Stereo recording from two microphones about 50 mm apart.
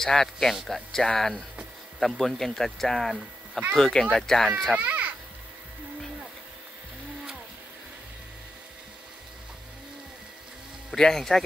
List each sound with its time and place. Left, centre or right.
0.1 s speech: centre
4.7 s a sound: right
11.0 s speech: centre